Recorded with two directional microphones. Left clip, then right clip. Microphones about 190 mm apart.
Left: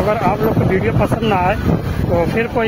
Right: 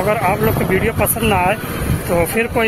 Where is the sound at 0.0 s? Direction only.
5° left (ahead or behind).